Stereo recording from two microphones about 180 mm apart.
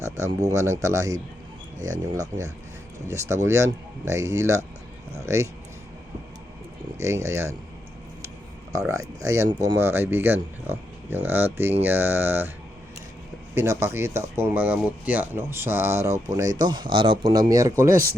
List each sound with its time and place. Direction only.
0.4 s speech: 15° right (ahead or behind)
7.0 s speech: 15° right (ahead or behind)
8.9 s speech: 15° right (ahead or behind)
13.5 s speech: 15° right (ahead or behind)